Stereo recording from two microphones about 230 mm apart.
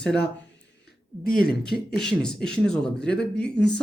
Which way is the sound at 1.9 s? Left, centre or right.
Centre.